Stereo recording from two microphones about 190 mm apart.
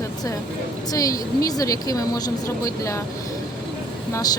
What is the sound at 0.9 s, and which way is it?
Speech, 20° left (ahead or behind).